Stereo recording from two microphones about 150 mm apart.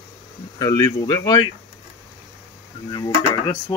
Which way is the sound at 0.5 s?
25° left (ahead or behind).